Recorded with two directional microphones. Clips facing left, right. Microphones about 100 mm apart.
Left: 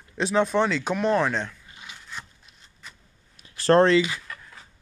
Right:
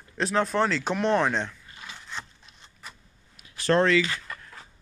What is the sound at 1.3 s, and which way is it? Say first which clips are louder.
Speech: even; 15° right (ahead or behind).